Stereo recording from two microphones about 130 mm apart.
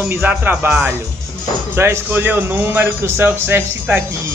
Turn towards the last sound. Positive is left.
turn(degrees=-15)  # may be behind; listen again after turning